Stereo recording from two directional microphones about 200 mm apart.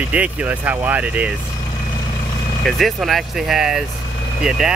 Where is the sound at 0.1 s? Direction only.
5° right (ahead or behind).